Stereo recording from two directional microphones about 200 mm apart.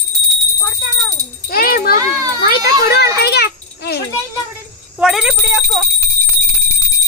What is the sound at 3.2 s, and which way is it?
Children playing, 55° left (ahead or behind).